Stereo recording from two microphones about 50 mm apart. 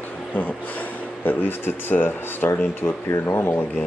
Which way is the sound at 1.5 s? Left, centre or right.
Left.